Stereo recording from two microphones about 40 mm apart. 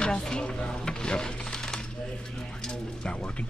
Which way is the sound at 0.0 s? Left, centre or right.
Centre.